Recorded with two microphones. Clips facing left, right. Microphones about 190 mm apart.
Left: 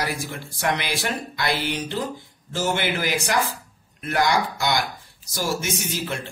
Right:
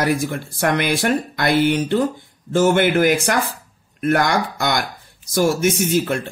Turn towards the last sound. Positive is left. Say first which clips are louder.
# right 10 dB
turn(degrees=-55)  # may be behind; listen again after turning